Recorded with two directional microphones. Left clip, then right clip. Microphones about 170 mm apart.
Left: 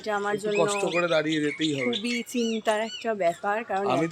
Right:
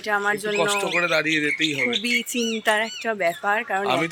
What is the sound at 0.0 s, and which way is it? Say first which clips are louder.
Speech: right 5 dB; 10° right (ahead or behind).